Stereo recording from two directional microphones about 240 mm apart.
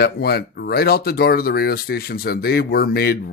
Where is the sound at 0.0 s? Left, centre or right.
Left.